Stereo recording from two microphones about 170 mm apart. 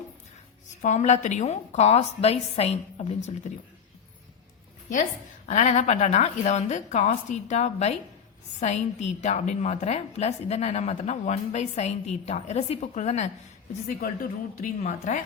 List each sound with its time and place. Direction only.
0.8 s a woman's voice: 45° left (ahead or behind)
5.5 s a woman's voice: 40° left (ahead or behind)
13.8 s a woman's voice: 55° left (ahead or behind)